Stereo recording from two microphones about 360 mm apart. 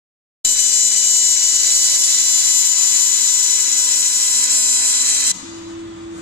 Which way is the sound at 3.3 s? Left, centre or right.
Right.